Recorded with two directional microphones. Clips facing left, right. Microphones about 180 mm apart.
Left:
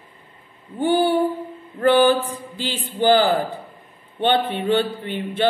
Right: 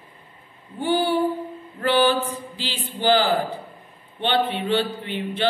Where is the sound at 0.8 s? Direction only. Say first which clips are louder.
Left 3 dB; 55° left (ahead or behind).